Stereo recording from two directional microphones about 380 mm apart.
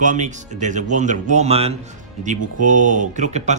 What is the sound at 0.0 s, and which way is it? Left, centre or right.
Speech, centre.